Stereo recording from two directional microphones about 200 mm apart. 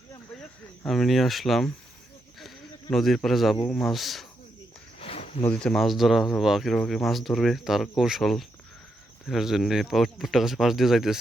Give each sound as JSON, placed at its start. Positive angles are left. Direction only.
{"t": 0.9, "sound": "speech", "side_deg": 0}
{"t": 2.9, "sound": "speech", "side_deg": 0}
{"t": 4.9, "sound": "a sound", "side_deg": 30}
{"t": 5.4, "sound": "speech", "side_deg": 5}